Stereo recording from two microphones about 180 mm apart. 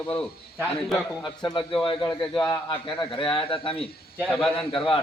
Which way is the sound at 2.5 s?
25° left (ahead or behind).